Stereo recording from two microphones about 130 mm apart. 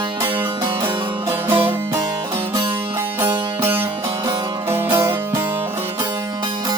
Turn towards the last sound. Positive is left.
turn(degrees=-20)  # may be behind; listen again after turning